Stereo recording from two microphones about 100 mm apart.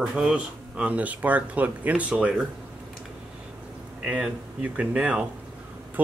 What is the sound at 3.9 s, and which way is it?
Speech, 10° right (ahead or behind).